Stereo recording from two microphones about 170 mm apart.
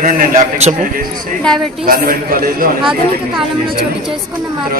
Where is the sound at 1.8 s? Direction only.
55° right (ahead or behind).